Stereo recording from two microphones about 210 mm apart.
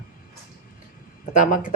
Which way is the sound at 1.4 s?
40° left (ahead or behind).